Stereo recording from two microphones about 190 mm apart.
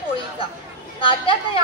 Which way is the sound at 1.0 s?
30° left (ahead or behind).